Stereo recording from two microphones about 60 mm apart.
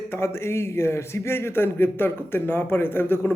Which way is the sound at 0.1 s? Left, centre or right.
Left.